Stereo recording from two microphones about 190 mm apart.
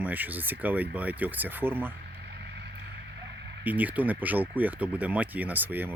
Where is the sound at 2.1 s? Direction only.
60° right (ahead or behind).